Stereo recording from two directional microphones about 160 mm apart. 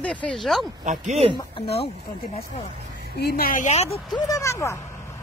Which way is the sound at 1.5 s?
40° left (ahead or behind).